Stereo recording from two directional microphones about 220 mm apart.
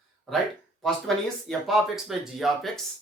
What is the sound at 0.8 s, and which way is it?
Speech, centre (ahead or behind).